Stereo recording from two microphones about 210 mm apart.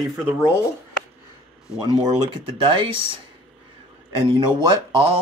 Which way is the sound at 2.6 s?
25° right (ahead or behind).